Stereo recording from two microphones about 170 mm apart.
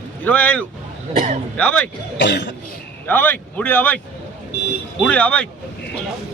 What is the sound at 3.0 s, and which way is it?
Speech, 10° left (ahead or behind).